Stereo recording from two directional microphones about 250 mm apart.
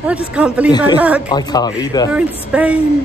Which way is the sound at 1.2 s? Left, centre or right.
Centre.